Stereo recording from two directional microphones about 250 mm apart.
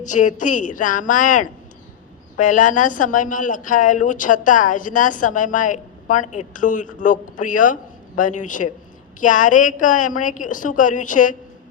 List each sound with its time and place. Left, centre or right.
0.0 s speech: left